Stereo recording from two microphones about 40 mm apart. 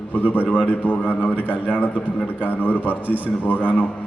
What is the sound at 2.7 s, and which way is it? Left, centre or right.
Speech, right.